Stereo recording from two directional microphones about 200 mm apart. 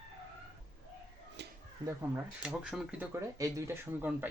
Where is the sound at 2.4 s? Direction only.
5° right (ahead or behind).